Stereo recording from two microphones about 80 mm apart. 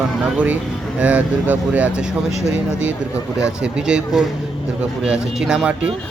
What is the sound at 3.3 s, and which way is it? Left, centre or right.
Speech, centre.